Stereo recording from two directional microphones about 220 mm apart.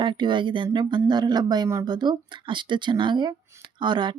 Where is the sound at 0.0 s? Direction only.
20° right (ahead or behind).